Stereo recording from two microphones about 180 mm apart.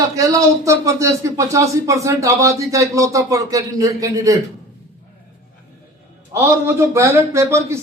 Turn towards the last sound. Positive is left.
turn(degrees=-15)  # may be behind; listen again after turning